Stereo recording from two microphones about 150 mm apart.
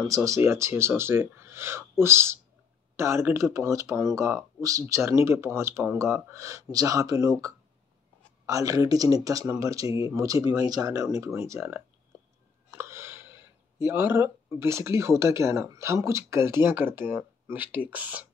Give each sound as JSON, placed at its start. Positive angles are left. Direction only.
{"t": 0.0, "sound": "speech", "side_deg": -20}